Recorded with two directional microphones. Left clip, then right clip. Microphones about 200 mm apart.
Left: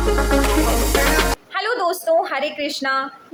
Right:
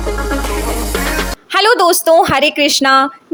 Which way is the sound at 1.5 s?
55° right (ahead or behind).